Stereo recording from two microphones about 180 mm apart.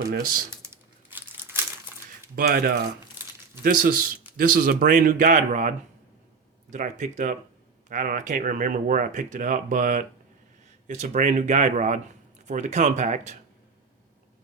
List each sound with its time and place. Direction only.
0.1 s speech: 55° right (ahead or behind)
0.6 s crumpling: 15° right (ahead or behind)
2.3 s speech: 60° right (ahead or behind); by 13.3 s 40° right (ahead or behind)